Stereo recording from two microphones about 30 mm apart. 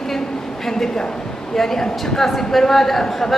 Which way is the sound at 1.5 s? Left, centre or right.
Centre.